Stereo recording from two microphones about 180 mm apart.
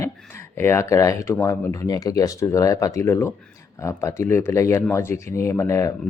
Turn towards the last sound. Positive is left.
turn(degrees=15)  # may be behind; listen again after turning